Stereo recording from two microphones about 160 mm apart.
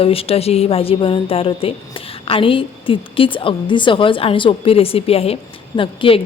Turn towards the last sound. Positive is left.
turn(degrees=35)  # may be behind; listen again after turning